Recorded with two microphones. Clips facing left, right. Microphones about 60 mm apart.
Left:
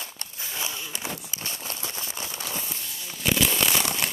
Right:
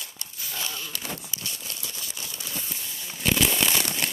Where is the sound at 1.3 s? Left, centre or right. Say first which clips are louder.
Left 2 dB; left.